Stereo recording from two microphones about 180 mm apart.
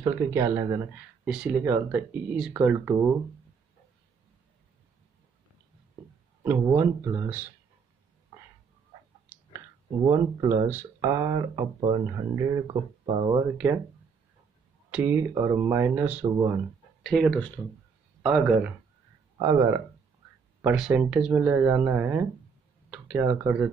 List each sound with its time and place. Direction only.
0.0 s speech: 15° right (ahead or behind)
6.4 s speech: 15° right (ahead or behind)
9.3 s clicking: 15° right (ahead or behind)
10.0 s speech: 15° right (ahead or behind)
14.9 s speech: 10° right (ahead or behind)
17.0 s speech: 5° left (ahead or behind)
19.3 s speech: 20° right (ahead or behind)
20.6 s speech: 5° right (ahead or behind)